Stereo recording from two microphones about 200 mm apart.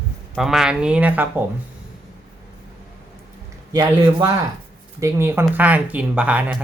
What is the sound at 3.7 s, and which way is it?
Speech, 15° right (ahead or behind).